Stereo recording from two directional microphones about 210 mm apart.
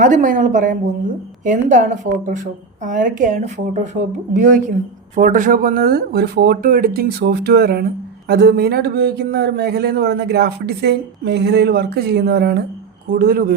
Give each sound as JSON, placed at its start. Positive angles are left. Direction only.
{"t": 0.0, "sound": "a woman's voice", "side_deg": -40}